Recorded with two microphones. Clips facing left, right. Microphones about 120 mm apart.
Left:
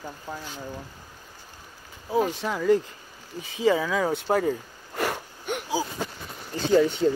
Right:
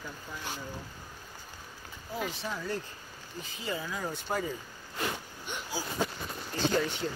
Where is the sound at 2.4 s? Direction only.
90° left; by 5.6 s 60° left (ahead or behind).